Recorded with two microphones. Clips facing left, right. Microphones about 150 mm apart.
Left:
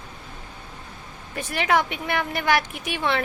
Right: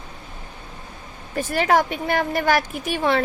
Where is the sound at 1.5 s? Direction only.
40° right (ahead or behind).